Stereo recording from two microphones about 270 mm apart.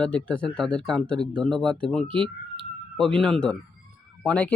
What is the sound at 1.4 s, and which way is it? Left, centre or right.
Speech, centre.